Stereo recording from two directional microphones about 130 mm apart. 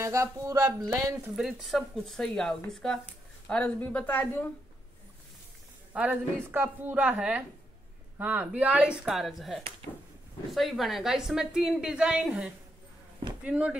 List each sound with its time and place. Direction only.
0.0 s speech: 25° right (ahead or behind)
1.3 s a woman's voice: centre (ahead or behind)
5.9 s a woman's voice: 10° right (ahead or behind)